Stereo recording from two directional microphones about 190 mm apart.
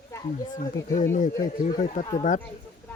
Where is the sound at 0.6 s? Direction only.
45° left (ahead or behind).